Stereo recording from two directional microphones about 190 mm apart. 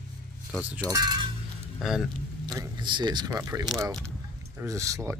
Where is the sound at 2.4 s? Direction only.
25° right (ahead or behind).